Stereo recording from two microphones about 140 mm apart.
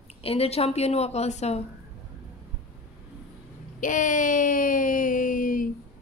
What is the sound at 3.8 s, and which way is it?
Speech, 65° left (ahead or behind).